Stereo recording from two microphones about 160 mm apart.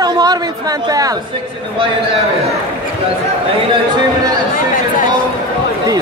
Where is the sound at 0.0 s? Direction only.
25° right (ahead or behind).